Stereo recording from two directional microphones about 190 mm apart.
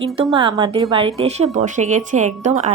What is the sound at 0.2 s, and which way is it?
A woman's voice, 25° right (ahead or behind).